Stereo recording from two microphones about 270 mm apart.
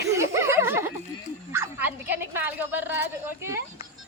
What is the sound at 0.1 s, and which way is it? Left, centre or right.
Chuckle, centre.